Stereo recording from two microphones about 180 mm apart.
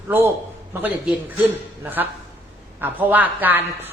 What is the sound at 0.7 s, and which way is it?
A man's voice, 10° right (ahead or behind).